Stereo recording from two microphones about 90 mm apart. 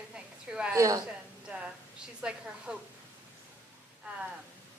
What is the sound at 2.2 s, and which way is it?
Speech, 10° right (ahead or behind).